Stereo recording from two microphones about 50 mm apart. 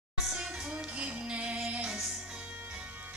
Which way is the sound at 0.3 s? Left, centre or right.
Centre.